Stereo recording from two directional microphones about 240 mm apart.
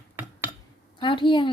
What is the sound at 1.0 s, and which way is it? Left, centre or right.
Speech, centre.